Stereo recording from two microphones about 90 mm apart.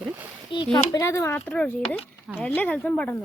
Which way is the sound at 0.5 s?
70° left (ahead or behind).